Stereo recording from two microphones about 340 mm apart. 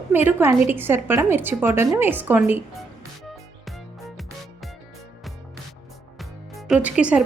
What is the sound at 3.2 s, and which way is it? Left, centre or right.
Music, centre.